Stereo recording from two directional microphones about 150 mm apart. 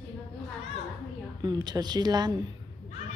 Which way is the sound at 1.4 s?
25° right (ahead or behind).